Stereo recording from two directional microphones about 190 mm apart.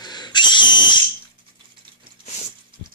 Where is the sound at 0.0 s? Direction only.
20° left (ahead or behind).